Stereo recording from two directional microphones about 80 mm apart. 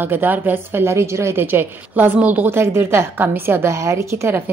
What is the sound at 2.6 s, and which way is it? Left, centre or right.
A woman's voice, right.